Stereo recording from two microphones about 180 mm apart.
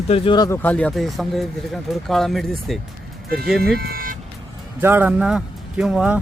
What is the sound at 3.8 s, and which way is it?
Vehicle, 55° right (ahead or behind).